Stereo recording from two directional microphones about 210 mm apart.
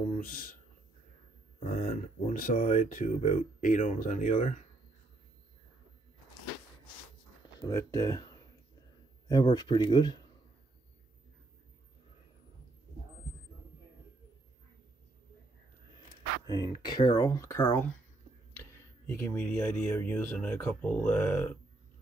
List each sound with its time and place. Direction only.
1.6 s speech: 40° left (ahead or behind)
7.6 s speech: 15° left (ahead or behind)
9.3 s speech: 20° left (ahead or behind)
16.4 s speech: 20° left (ahead or behind)
19.0 s speech: 10° left (ahead or behind)